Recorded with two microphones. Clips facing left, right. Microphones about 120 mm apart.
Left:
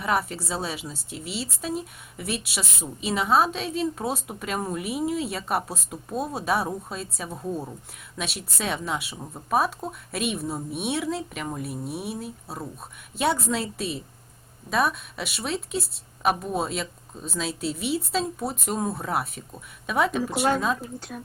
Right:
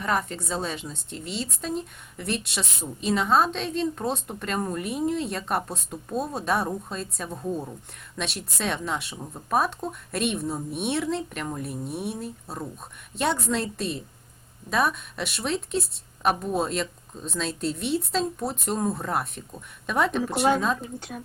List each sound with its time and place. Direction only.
0.0 s a woman's voice: 5° left (ahead or behind)